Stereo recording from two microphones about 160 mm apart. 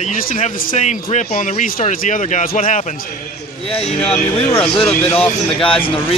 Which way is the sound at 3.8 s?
40° left (ahead or behind).